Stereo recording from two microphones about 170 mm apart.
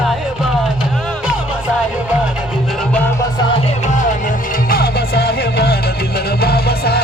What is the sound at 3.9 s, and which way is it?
Music, 45° left (ahead or behind).